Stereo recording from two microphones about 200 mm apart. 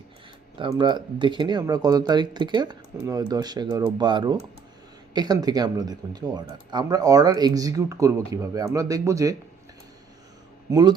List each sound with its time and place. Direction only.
0.6 s speech: 20° right (ahead or behind)
10.7 s speech: 20° right (ahead or behind)